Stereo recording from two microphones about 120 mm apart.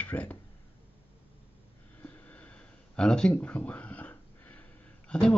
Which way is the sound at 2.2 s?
10° left (ahead or behind).